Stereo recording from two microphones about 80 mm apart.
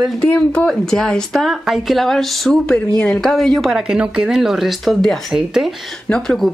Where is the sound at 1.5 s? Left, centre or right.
Centre.